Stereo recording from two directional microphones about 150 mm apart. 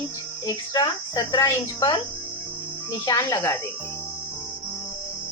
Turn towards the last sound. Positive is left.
turn(degrees=20)  # may be behind; listen again after turning